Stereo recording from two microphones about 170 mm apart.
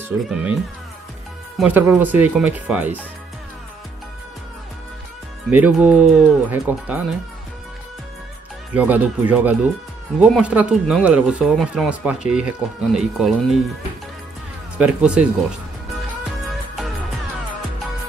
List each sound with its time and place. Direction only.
0.1 s speech: 10° right (ahead or behind)
1.6 s speech: 10° right (ahead or behind)
5.5 s speech: 10° right (ahead or behind)
8.7 s speech: 10° right (ahead or behind)
14.8 s speech: 5° right (ahead or behind)